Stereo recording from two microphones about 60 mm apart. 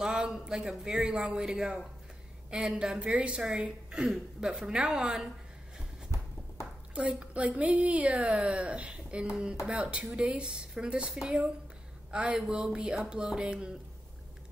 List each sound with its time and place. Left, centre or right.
0.0 s a man's voice: centre
7.0 s a woman's voice: centre